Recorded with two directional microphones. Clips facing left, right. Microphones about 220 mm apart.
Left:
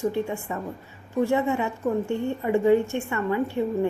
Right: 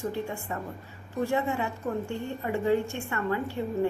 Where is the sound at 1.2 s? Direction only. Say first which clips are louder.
Left 3 dB; 15° left (ahead or behind).